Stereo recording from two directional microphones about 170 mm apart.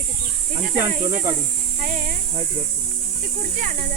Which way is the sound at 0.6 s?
50° right (ahead or behind).